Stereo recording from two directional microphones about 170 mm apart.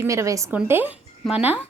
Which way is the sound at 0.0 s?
20° right (ahead or behind).